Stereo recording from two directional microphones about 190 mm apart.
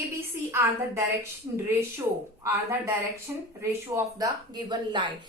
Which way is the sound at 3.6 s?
15° right (ahead or behind).